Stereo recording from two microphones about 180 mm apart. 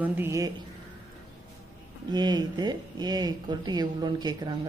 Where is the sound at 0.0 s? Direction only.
10° right (ahead or behind).